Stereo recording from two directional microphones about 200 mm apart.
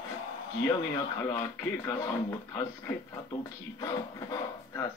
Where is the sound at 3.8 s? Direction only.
20° left (ahead or behind).